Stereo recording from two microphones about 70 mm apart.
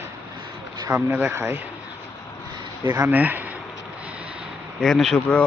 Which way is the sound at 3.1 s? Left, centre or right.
Right.